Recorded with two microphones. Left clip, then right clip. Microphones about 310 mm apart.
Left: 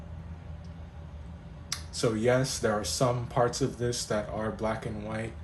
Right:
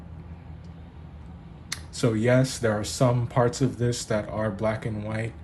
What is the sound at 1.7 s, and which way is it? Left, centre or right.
Speech, right.